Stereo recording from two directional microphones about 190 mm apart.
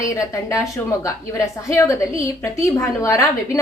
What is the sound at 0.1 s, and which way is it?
A woman's voice, 15° left (ahead or behind).